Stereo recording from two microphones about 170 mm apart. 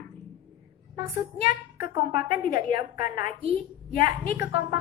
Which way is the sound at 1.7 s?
60° left (ahead or behind).